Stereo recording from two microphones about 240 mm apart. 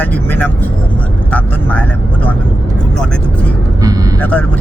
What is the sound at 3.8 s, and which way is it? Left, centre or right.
Vehicle, centre.